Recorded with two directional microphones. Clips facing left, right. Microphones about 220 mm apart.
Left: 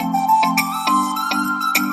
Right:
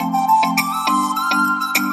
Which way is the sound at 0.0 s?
Centre (ahead or behind).